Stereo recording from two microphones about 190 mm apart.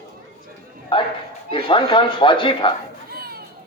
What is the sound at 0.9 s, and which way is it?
A man's voice, 25° left (ahead or behind).